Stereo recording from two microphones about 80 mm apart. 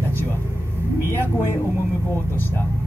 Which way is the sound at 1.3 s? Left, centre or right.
Left.